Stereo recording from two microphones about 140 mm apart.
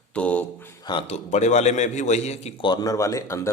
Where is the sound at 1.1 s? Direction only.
55° left (ahead or behind).